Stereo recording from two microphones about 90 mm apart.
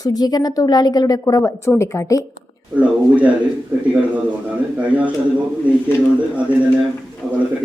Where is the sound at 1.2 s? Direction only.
30° left (ahead or behind).